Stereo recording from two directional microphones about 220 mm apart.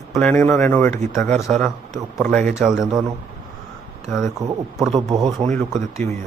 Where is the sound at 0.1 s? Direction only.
5° left (ahead or behind).